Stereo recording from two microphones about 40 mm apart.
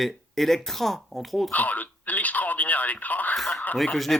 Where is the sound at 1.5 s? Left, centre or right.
Left.